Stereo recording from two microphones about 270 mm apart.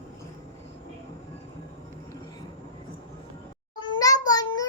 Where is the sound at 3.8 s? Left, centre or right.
Centre.